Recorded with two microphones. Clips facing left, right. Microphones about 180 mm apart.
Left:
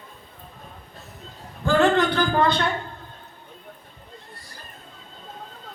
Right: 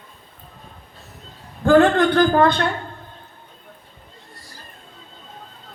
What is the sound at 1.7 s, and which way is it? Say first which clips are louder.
Speech: right 5 dB; 50° right (ahead or behind).